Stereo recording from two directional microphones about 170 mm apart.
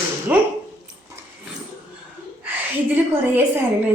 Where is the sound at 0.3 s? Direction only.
10° right (ahead or behind).